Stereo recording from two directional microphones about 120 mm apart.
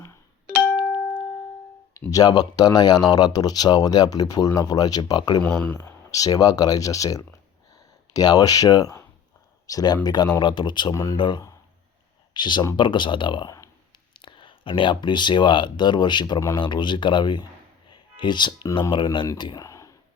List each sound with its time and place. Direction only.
0.5 s music: 10° left (ahead or behind)
2.0 s speech: 30° left (ahead or behind)
5.4 s speech: 10° left (ahead or behind)
6.1 s speech: 30° left (ahead or behind)
10.9 s speech: 25° left (ahead or behind)
11.2 s speech: 40° left (ahead or behind)
19.6 s a sound: 25° left (ahead or behind)